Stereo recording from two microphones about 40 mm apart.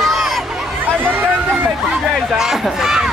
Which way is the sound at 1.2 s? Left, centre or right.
Right.